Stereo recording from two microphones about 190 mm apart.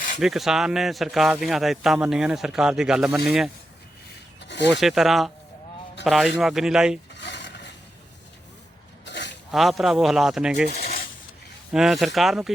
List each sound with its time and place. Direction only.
0.2 s speech: centre (ahead or behind)
4.4 s rub: 70° left (ahead or behind)
4.7 s speech: centre (ahead or behind)
7.1 s a sound: 65° left (ahead or behind)
9.0 s zipper: 65° left (ahead or behind)
9.5 s speech: centre (ahead or behind)
11.7 s speech: centre (ahead or behind)